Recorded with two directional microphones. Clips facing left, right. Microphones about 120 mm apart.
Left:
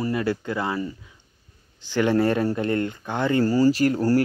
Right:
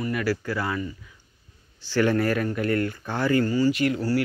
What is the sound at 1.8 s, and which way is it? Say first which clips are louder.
Speech: left 2 dB; 20° left (ahead or behind).